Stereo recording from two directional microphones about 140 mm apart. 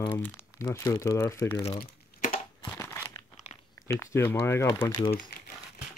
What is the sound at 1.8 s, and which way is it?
Crumpling, 90° left.